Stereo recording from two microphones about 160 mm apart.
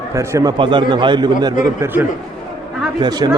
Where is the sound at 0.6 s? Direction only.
30° right (ahead or behind).